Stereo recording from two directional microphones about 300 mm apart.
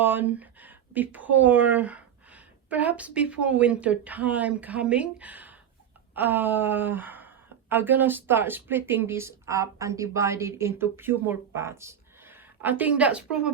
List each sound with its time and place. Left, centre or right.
0.0 s speech: centre